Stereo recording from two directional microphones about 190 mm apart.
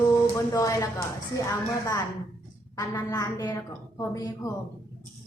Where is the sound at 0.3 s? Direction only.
15° left (ahead or behind).